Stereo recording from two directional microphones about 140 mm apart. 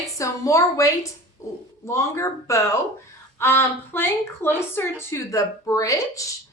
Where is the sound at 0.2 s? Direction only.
20° left (ahead or behind).